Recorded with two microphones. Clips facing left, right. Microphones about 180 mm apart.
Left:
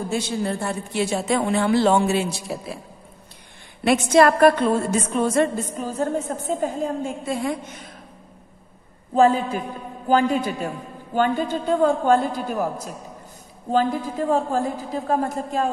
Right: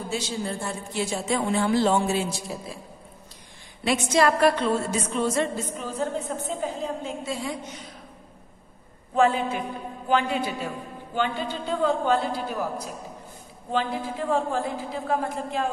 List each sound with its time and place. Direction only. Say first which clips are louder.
0.1 s a woman's voice: left 4 dB; 60° left (ahead or behind)
3.8 s a woman's voice: left 6 dB; 55° left (ahead or behind)
9.1 s a woman's voice: left 4 dB; 35° left (ahead or behind)